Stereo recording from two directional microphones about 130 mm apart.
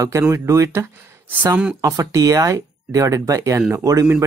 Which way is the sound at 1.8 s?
25° right (ahead or behind).